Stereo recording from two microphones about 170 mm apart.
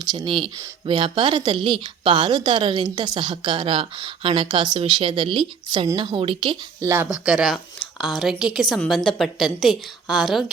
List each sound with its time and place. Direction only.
0.0 s a woman's voice: 25° right (ahead or behind)
6.9 s a woman's voice: 10° right (ahead or behind)